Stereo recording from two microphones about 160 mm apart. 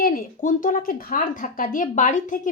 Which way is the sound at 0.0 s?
65° left (ahead or behind).